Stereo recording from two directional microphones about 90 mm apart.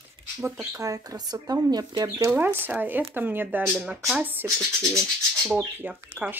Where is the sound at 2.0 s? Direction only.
35° right (ahead or behind).